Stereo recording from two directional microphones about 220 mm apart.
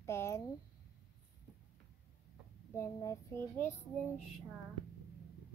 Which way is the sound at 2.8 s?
15° left (ahead or behind).